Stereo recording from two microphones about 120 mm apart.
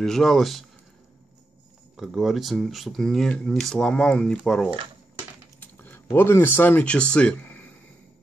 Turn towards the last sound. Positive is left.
turn(degrees=10)  # may be behind; listen again after turning